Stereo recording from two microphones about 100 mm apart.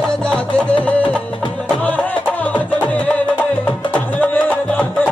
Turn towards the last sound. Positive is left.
turn(degrees=15)  # may be behind; listen again after turning